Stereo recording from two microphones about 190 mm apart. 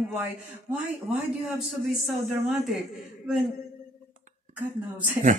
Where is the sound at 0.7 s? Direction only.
5° right (ahead or behind).